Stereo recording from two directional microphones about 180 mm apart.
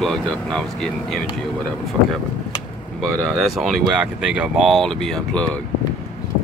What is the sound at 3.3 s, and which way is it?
Speech, centre (ahead or behind).